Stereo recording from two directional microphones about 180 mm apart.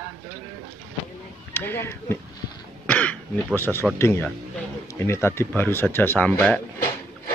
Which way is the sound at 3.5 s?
10° left (ahead or behind).